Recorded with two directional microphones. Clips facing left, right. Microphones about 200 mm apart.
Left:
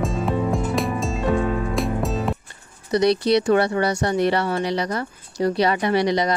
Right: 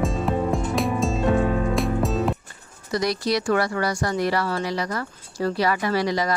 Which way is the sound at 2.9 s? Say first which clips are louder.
Left 6 dB; 20° left (ahead or behind).